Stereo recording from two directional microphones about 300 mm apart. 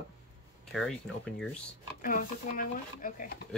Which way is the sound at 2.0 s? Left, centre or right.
Left.